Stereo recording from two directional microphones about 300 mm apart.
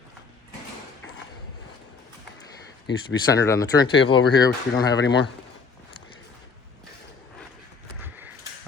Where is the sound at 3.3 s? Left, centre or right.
Centre.